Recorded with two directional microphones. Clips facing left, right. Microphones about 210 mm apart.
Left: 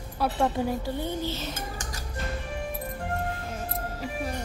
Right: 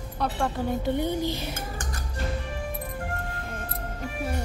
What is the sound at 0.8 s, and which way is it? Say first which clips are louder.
Speech: right 4 dB; 20° right (ahead or behind).